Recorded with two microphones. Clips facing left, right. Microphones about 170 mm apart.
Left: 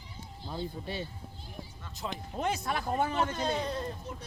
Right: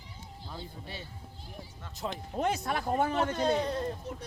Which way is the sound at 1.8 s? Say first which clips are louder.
Right 2 dB; 55° right (ahead or behind).